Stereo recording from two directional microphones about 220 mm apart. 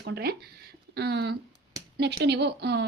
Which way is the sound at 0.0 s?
45° right (ahead or behind).